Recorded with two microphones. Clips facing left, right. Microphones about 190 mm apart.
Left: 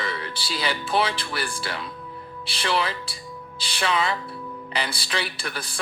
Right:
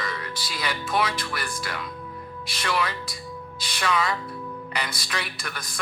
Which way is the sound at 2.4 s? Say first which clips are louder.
Left 2 dB; 30° left (ahead or behind).